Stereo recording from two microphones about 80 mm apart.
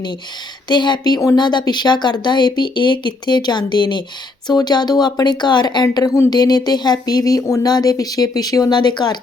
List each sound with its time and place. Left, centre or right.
0.7 s speech: left
8.8 s speech: left